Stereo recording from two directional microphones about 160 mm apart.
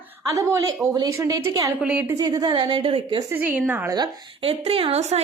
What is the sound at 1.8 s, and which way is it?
Speech, 5° right (ahead or behind).